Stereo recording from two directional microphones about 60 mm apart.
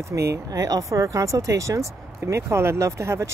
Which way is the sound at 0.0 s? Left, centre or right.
Right.